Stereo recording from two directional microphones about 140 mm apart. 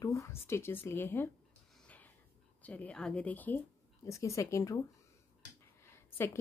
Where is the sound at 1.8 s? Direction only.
10° left (ahead or behind).